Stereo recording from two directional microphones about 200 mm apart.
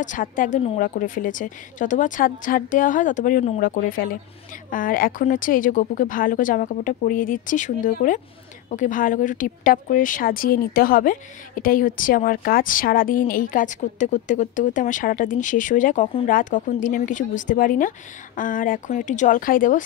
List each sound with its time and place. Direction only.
0.0 s a woman's voice: 40° left (ahead or behind)